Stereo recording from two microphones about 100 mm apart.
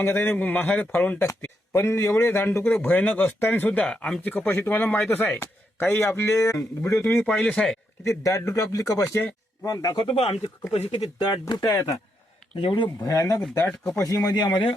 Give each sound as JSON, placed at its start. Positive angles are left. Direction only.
{"t": 0.0, "sound": "speech", "side_deg": 20}
{"t": 7.2, "sound": "speech", "side_deg": 5}
{"t": 8.0, "sound": "speech", "side_deg": 30}
{"t": 10.2, "sound": "speech", "side_deg": 90}
{"t": 11.2, "sound": "speech", "side_deg": 45}
{"t": 11.6, "sound": "speech", "side_deg": 30}
{"t": 12.5, "sound": "speech", "side_deg": 55}
{"t": 13.1, "sound": "speech", "side_deg": 35}